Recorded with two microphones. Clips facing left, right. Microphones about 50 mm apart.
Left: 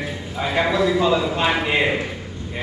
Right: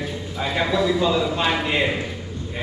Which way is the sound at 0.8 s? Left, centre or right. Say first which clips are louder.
Left 1 dB; centre.